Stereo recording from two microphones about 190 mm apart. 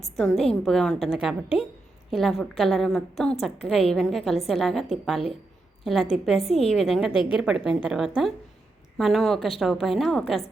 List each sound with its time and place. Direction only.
0.2 s a woman's voice: centre (ahead or behind)
7.1 s a woman's voice: 25° left (ahead or behind)
7.3 s a woman's voice: 5° right (ahead or behind)